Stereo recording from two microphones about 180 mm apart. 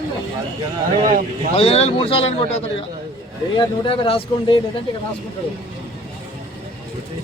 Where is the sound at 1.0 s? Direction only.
45° right (ahead or behind).